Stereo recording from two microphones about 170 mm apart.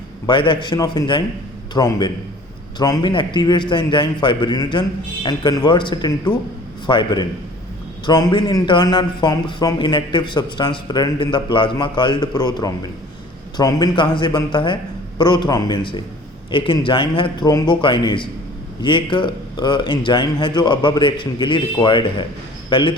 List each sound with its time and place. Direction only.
0.3 s a man's voice: 25° left (ahead or behind)